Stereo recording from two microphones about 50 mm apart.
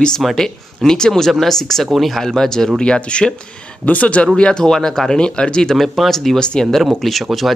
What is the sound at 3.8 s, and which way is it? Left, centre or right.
Speech, left.